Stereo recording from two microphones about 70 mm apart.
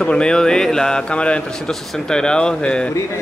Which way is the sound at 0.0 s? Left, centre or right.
Centre.